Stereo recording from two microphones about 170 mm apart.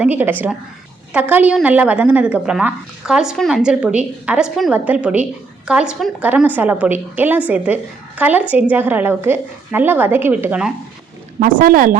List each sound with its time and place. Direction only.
0.0 s a woman's voice: 10° right (ahead or behind)
11.3 s speech: 55° right (ahead or behind)